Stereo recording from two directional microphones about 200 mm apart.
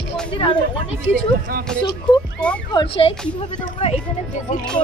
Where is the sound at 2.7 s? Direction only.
30° left (ahead or behind).